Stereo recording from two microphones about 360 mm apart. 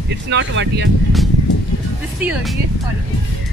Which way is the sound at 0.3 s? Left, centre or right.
Right.